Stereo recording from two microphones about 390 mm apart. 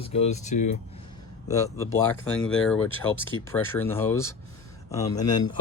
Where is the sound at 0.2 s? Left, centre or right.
Centre.